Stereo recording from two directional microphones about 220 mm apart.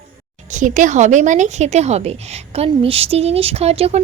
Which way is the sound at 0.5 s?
35° right (ahead or behind).